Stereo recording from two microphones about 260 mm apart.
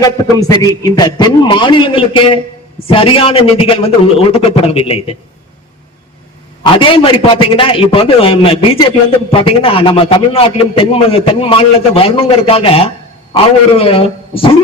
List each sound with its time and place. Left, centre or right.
0.0 s a man's voice: centre
6.6 s a man's voice: centre